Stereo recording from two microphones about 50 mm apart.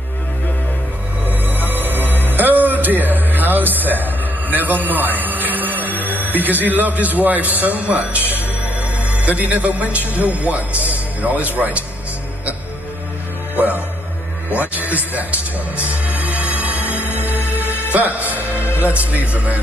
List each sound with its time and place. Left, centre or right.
1.2 s music: right
3.2 s a sound: right
6.0 s a man's voice: right
13.6 s music: right
14.5 s a man's voice: right
15.7 s music: right
19.1 s a man's voice: right